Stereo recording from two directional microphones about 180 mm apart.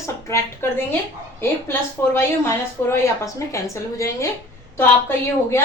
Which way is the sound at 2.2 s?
15° left (ahead or behind).